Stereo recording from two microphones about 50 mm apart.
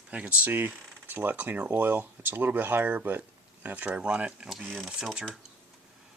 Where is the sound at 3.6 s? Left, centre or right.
Right.